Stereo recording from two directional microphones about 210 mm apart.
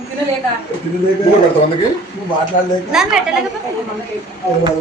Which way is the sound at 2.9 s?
Centre (ahead or behind).